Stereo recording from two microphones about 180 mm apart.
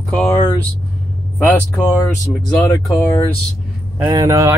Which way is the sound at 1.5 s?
10° left (ahead or behind).